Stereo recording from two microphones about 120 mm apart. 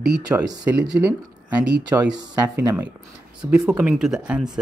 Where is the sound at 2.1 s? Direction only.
25° right (ahead or behind).